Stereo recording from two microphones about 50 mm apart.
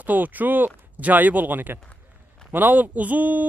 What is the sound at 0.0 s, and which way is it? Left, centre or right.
A man's voice, right.